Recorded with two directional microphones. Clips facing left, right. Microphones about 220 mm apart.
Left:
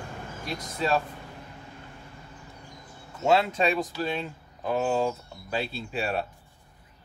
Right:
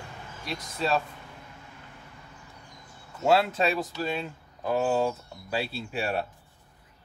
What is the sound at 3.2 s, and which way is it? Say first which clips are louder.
Speech: even; 5° right (ahead or behind).